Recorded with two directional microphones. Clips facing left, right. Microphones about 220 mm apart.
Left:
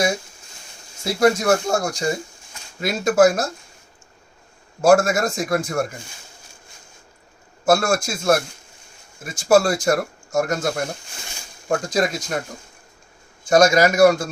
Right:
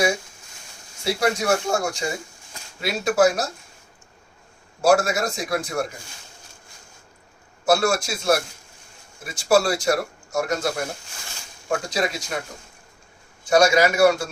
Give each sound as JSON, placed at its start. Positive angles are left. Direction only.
{"t": 1.0, "sound": "speech", "side_deg": 45}
{"t": 4.8, "sound": "speech", "side_deg": 50}
{"t": 7.6, "sound": "speech", "side_deg": 50}
{"t": 11.7, "sound": "speech", "side_deg": 45}
{"t": 13.5, "sound": "speech", "side_deg": 45}